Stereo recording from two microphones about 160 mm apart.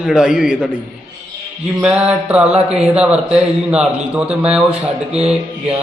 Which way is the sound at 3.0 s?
5° right (ahead or behind).